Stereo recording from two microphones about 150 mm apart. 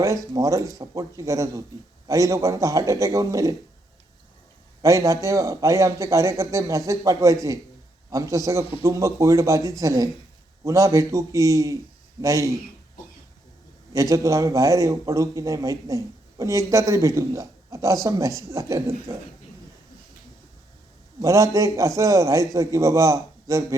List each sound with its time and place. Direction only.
0.3 s a man's voice: 20° right (ahead or behind)
4.8 s a man's voice: 20° right (ahead or behind)
13.9 s a man's voice: 20° right (ahead or behind)
21.2 s a man's voice: 20° right (ahead or behind)